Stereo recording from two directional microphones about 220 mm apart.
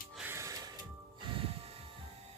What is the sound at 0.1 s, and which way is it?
Music, 5° right (ahead or behind).